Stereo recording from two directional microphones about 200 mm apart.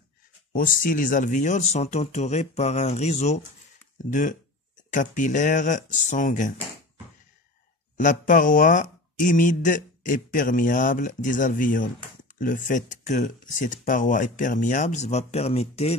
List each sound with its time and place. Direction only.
0.5 s speech: 45° left (ahead or behind)
8.0 s speech: 40° left (ahead or behind)